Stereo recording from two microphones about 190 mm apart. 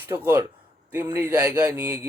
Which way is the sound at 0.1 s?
10° right (ahead or behind).